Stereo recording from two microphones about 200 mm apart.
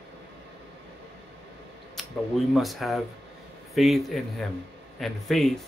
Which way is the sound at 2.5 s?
Centre (ahead or behind).